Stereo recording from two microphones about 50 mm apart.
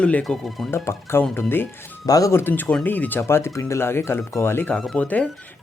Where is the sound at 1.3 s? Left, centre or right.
Left.